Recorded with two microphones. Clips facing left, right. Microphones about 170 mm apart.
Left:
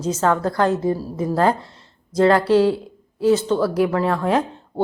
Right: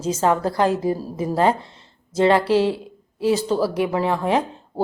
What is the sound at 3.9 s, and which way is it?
Speech, 10° right (ahead or behind).